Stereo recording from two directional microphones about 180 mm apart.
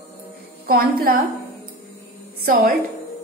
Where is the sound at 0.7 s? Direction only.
55° right (ahead or behind).